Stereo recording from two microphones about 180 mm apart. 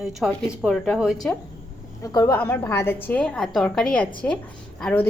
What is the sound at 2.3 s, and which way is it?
A woman's voice, 10° left (ahead or behind).